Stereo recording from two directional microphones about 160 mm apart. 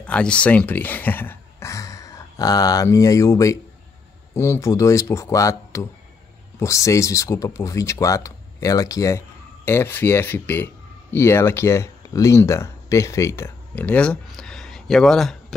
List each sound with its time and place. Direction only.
0.0 s speech: 5° left (ahead or behind)